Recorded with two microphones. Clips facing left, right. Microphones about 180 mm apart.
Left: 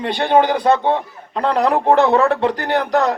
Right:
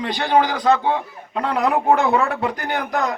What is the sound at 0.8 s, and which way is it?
A man's voice, 35° left (ahead or behind).